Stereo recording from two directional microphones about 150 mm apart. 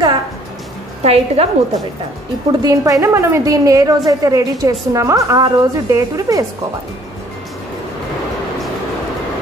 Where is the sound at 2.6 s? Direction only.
20° right (ahead or behind).